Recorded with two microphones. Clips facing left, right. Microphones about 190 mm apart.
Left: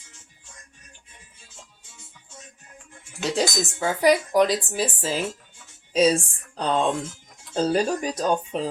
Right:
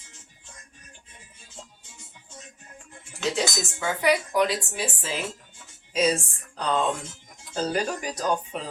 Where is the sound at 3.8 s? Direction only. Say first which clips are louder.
Left 4 dB; 35° left (ahead or behind).